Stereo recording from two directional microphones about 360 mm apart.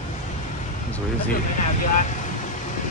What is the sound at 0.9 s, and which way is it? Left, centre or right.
Speech, centre.